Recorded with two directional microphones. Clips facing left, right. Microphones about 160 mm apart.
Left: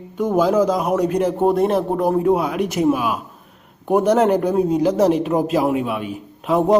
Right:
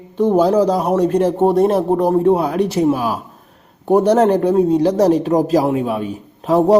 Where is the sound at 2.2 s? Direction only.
35° right (ahead or behind).